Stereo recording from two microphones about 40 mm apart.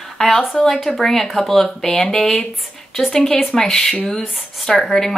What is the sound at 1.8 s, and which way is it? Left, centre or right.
Speech, left.